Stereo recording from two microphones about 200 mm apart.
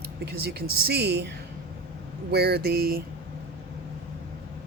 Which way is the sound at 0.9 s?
55° right (ahead or behind).